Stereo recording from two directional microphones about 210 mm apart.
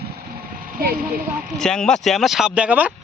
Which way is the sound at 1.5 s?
Centre (ahead or behind).